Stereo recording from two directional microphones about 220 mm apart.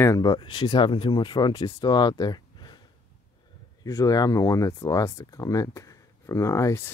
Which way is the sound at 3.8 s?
15° left (ahead or behind).